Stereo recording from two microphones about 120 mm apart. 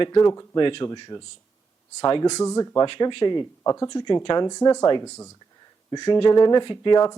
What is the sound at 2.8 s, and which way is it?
Speech, 45° left (ahead or behind).